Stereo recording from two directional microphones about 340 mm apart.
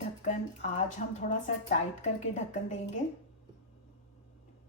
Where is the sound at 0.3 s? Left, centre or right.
Left.